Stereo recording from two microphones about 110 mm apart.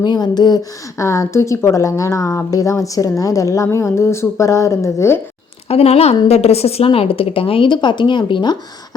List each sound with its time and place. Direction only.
0.0 s speech: 40° left (ahead or behind); by 5.2 s 25° left (ahead or behind)
5.6 s a woman's voice: 70° left (ahead or behind); by 9.0 s 40° left (ahead or behind)